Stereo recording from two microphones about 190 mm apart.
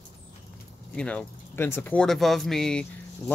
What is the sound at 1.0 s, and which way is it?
Speech, 5° left (ahead or behind).